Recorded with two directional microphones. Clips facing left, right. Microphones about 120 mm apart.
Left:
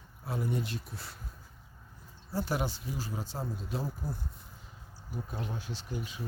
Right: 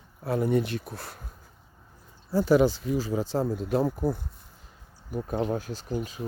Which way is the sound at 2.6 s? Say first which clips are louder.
Right 12 dB; 90° right.